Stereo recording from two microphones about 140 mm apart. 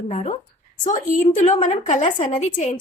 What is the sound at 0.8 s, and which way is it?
A woman's voice, 65° left (ahead or behind).